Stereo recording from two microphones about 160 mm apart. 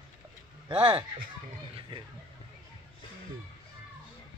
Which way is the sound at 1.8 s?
30° right (ahead or behind).